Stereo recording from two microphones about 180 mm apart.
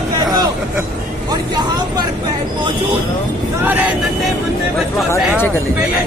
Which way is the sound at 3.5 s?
10° right (ahead or behind).